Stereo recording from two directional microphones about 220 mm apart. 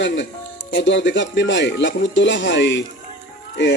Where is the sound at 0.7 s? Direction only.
55° left (ahead or behind).